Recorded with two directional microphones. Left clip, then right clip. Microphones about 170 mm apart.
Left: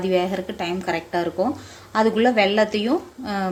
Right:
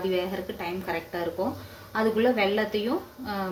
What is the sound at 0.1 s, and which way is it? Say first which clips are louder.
A woman's voice: left 7 dB; 60° left (ahead or behind).